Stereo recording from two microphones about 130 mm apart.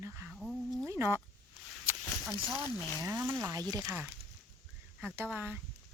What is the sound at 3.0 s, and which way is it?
Speech, 25° right (ahead or behind).